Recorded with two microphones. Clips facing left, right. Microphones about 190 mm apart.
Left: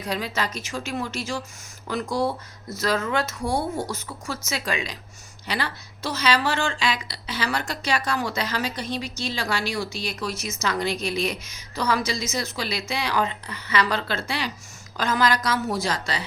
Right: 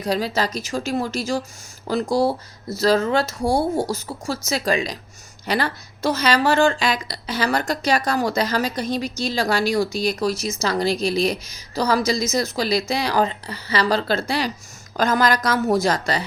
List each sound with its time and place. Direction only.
0.0 s a woman's voice: 35° right (ahead or behind)